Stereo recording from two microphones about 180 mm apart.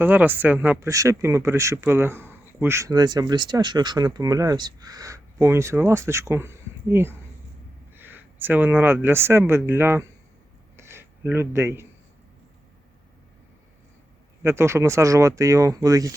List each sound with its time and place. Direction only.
0.0 s speech: 10° right (ahead or behind)
10.8 s a sound: 15° right (ahead or behind)
14.4 s speech: 15° right (ahead or behind)